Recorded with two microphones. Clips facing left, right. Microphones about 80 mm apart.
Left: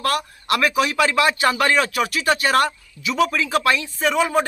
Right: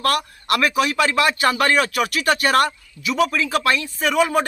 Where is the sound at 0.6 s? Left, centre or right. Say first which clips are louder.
Even; centre.